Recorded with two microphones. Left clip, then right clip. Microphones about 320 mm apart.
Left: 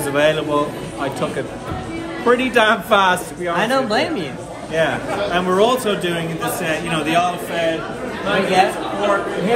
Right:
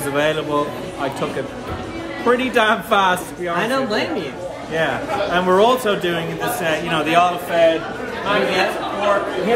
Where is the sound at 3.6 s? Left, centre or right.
Centre.